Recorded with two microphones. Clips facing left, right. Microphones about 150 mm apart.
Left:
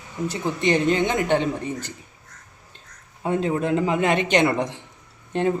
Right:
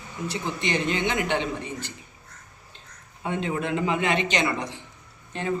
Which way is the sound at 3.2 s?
40° left (ahead or behind).